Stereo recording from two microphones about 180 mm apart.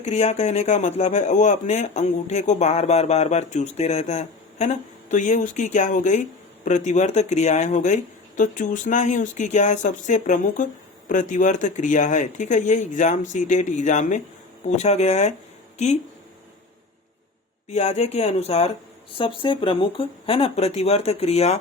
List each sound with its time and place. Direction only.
0.0 s speech: 35° left (ahead or behind)
17.7 s speech: 35° left (ahead or behind)